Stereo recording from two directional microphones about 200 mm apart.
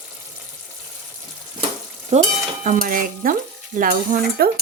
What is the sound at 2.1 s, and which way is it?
Speech, 35° right (ahead or behind).